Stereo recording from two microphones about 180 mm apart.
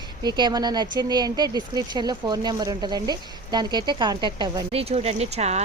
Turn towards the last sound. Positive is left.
turn(degrees=-35)  # may be behind; listen again after turning